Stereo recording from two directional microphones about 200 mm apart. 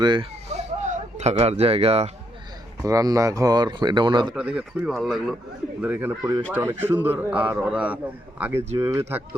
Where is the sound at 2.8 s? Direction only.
15° right (ahead or behind).